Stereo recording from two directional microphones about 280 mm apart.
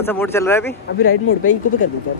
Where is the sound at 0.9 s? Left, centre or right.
Left.